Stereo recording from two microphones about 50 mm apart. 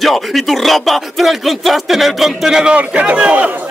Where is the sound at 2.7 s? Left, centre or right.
Right.